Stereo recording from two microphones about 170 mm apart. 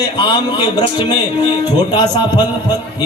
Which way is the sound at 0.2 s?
25° left (ahead or behind).